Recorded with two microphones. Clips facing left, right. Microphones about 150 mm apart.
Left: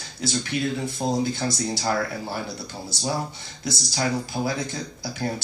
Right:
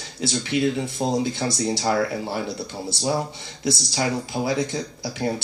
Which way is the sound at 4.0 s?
20° right (ahead or behind).